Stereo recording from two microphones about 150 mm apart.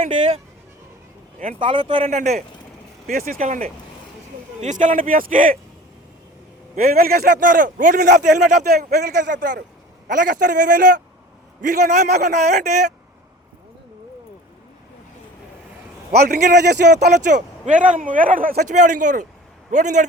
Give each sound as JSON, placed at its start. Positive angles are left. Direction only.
{"t": 1.5, "sound": "speech", "side_deg": -35}
{"t": 2.0, "sound": "speech", "side_deg": -50}
{"t": 3.1, "sound": "a man's voice", "side_deg": -75}
{"t": 6.7, "sound": "a man's voice", "side_deg": -75}
{"t": 16.1, "sound": "a man's voice", "side_deg": -90}
{"t": 17.3, "sound": "speech", "side_deg": -55}